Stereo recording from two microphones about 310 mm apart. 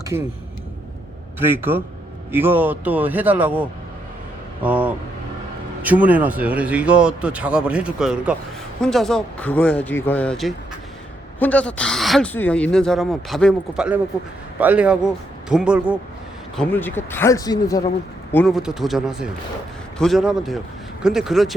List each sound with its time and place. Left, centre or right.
1.4 s a man's voice: centre
4.6 s a sound: centre
5.8 s speech: centre